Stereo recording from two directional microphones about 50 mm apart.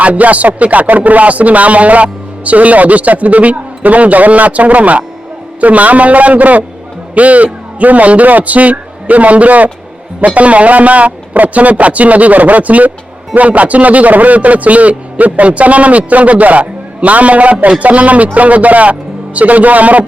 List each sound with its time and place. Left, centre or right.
0.0 s a man's voice: right